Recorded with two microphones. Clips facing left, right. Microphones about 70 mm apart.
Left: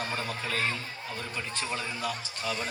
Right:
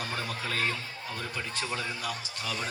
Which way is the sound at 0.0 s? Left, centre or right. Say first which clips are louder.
Left 1 dB; left.